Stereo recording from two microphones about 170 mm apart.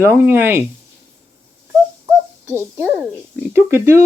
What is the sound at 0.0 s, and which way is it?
Speech, 15° right (ahead or behind).